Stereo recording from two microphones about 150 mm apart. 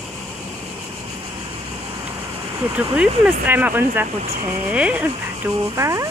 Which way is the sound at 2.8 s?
10° right (ahead or behind).